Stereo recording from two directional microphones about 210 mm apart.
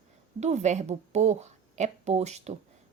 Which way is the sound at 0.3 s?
35° right (ahead or behind).